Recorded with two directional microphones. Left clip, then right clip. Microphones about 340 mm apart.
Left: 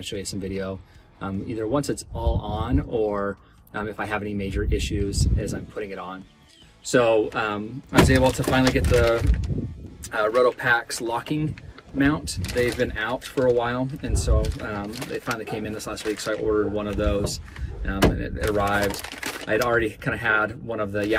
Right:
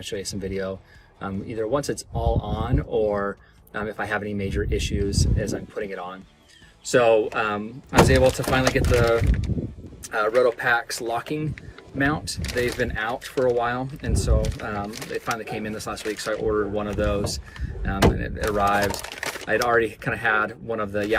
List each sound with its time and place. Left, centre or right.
0.0 s speech: centre
10.1 s speech: centre